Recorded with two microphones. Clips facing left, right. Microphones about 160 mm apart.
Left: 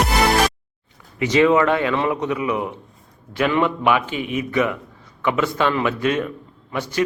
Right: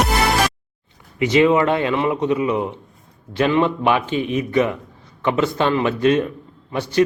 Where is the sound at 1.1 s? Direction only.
20° right (ahead or behind).